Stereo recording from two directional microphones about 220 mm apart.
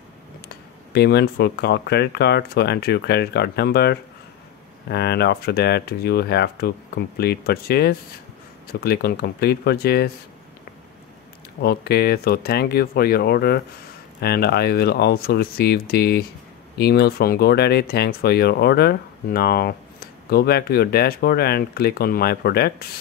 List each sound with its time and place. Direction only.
0.9 s speech: 50° left (ahead or behind)
11.6 s speech: 45° left (ahead or behind)